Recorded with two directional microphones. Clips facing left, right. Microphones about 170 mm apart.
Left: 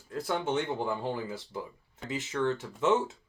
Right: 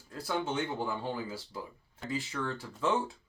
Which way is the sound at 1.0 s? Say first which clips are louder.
Left 3 dB; 20° left (ahead or behind).